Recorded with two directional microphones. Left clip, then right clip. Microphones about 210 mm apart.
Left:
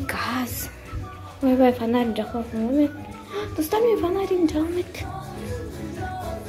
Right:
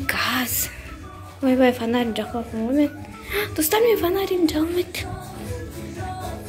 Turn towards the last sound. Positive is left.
turn(degrees=0)  # may be behind; listen again after turning